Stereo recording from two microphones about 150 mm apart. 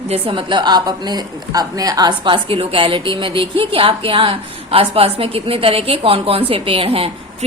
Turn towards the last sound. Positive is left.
turn(degrees=-40)  # may be behind; listen again after turning